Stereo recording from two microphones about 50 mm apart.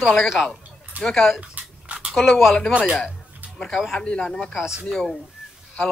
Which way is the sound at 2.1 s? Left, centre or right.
Centre.